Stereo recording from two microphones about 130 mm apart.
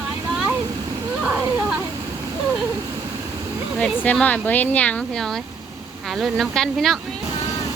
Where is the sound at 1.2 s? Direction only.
10° right (ahead or behind).